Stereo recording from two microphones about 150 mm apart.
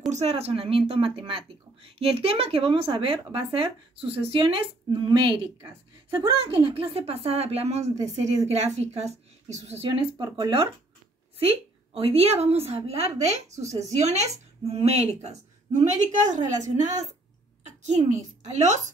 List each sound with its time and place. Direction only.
0.1 s speech: 45° right (ahead or behind)
6.6 s speech: 35° right (ahead or behind)
10.1 s a woman's voice: 30° right (ahead or behind); by 18.9 s 50° right (ahead or behind)